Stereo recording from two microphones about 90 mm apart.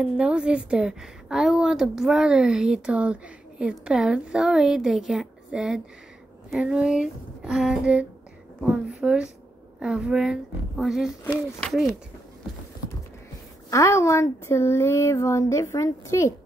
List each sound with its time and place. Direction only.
0.0 s a woman's voice: 10° right (ahead or behind)
13.7 s speech: 35° left (ahead or behind)